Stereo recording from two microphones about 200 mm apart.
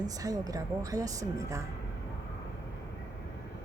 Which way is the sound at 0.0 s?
20° right (ahead or behind).